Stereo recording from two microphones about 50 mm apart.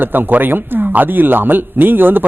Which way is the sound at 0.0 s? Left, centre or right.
Right.